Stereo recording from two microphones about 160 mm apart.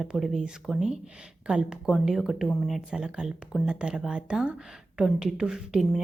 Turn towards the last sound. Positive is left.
turn(degrees=-5)  # may be behind; listen again after turning